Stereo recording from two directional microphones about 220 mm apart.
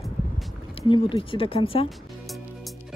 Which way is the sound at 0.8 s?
20° left (ahead or behind).